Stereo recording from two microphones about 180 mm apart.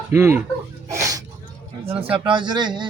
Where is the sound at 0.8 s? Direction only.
20° right (ahead or behind).